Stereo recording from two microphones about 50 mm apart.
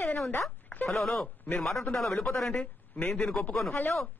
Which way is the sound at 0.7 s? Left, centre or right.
Left.